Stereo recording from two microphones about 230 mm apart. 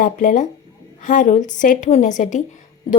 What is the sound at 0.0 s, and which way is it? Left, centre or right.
A woman's voice, left.